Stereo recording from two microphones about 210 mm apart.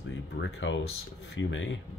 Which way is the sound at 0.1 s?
65° left (ahead or behind).